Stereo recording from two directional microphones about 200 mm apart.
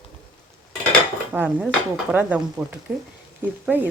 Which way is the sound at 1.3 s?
5° right (ahead or behind).